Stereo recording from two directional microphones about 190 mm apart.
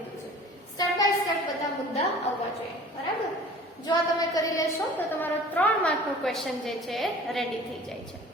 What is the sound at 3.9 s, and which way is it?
Child singing, 20° left (ahead or behind).